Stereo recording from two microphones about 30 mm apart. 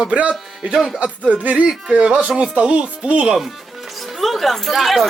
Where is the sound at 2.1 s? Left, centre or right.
Right.